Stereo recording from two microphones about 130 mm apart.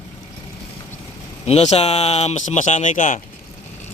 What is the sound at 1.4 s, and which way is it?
Speech, 55° left (ahead or behind).